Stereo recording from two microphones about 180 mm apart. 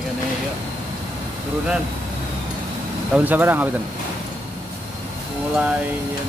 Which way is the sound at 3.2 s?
10° right (ahead or behind).